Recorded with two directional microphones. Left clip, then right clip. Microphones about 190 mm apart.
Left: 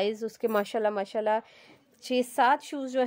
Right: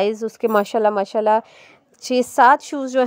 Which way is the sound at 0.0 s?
25° right (ahead or behind).